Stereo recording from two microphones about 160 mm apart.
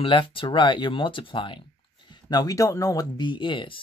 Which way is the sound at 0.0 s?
30° left (ahead or behind).